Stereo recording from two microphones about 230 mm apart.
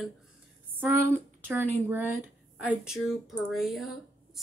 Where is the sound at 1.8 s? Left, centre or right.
Centre.